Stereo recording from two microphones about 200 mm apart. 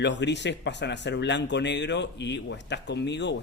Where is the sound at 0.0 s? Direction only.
60° left (ahead or behind).